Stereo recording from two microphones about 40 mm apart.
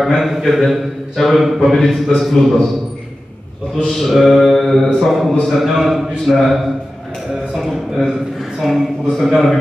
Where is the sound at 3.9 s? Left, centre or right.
Centre.